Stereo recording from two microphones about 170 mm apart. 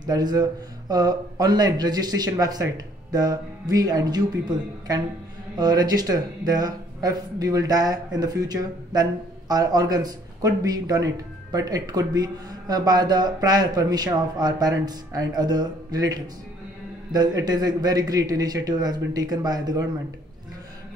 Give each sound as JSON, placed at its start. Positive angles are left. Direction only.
{"t": 0.0, "sound": "speech", "side_deg": -25}